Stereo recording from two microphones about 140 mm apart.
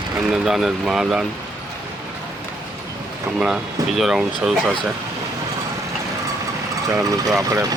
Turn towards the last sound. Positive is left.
turn(degrees=-20)  # may be behind; listen again after turning